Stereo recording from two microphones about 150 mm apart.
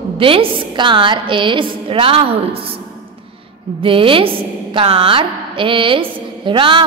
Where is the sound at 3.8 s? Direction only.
35° right (ahead or behind).